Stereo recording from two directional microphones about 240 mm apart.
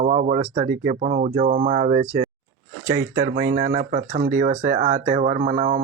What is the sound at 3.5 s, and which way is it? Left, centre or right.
Speech, right.